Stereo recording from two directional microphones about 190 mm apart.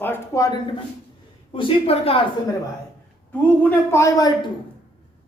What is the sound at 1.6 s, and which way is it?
Speech, 30° left (ahead or behind).